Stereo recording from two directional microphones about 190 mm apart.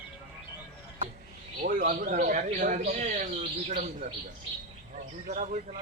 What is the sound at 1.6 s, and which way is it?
Speech, 50° right (ahead or behind).